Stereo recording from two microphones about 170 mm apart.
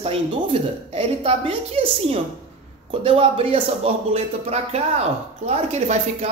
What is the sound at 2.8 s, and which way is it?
A man's voice, 35° right (ahead or behind).